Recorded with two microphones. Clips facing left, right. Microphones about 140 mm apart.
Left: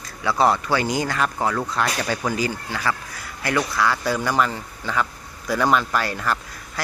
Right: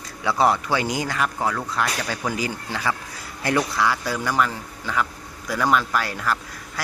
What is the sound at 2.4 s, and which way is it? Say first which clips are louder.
Speech: left 2 dB; 15° right (ahead or behind).